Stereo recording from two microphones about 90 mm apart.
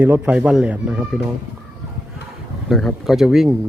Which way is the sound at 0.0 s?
20° right (ahead or behind).